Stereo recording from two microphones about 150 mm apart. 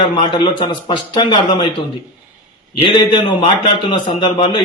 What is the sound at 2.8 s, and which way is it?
Speech, 35° left (ahead or behind).